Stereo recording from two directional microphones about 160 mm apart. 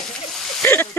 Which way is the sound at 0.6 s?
10° left (ahead or behind).